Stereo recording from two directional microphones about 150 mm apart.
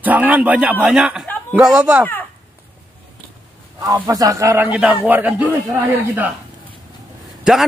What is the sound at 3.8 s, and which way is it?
A man's voice, 25° right (ahead or behind).